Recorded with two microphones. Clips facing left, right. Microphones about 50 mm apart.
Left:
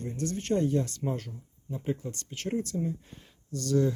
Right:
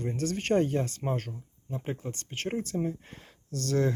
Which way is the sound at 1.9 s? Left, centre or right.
Right.